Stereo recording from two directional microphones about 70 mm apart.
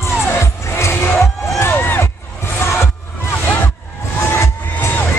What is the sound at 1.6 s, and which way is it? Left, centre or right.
Crowd, left.